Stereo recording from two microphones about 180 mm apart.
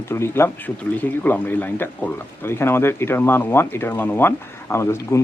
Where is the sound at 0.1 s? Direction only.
15° left (ahead or behind).